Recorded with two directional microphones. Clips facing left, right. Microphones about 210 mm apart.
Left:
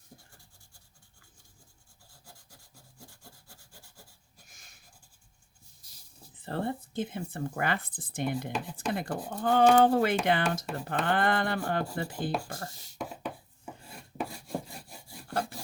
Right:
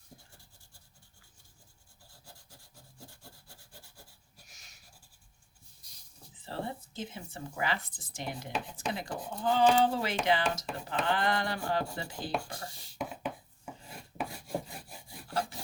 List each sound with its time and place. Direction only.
6.3 s speech: 55° left (ahead or behind)
15.3 s wood: 55° left (ahead or behind)